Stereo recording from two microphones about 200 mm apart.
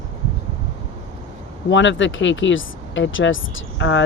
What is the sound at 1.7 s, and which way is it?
Speech, 65° left (ahead or behind).